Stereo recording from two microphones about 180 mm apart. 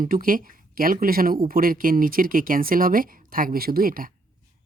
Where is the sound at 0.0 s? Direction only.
50° right (ahead or behind).